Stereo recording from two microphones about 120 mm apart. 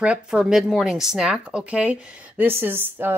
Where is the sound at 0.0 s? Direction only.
10° right (ahead or behind).